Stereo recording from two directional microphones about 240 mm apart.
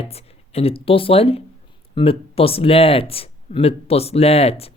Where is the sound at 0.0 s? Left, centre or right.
Left.